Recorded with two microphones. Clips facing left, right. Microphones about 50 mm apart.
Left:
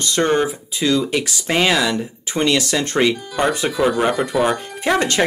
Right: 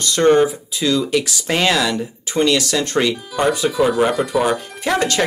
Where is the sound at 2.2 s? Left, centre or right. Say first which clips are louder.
Right 2 dB; left.